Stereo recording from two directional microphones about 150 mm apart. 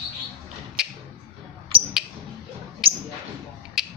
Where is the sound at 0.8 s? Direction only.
5° right (ahead or behind).